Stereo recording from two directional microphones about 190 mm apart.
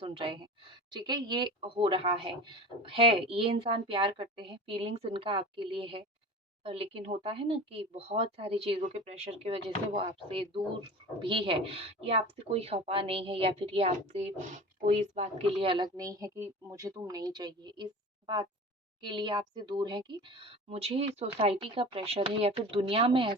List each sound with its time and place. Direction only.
0.0 s a woman's voice: 30° right (ahead or behind)
19.0 s a woman's voice: 25° right (ahead or behind)